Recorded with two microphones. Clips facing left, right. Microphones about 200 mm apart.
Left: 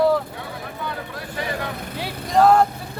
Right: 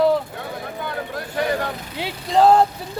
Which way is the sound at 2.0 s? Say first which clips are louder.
Right 1 dB; 25° right (ahead or behind).